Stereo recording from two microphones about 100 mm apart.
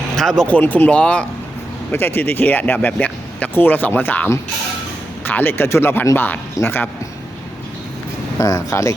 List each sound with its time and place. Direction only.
0.2 s speech: 5° left (ahead or behind)
1.9 s speech: 20° left (ahead or behind)
8.4 s speech: 30° left (ahead or behind)